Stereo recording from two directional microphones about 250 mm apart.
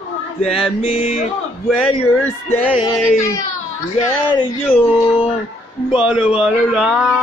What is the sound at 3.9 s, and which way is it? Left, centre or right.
Speech, left.